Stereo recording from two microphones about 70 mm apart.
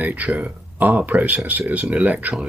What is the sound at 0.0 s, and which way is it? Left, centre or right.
Speech, right.